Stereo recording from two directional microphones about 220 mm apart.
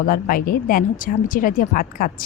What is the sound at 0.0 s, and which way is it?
Speech, 40° left (ahead or behind).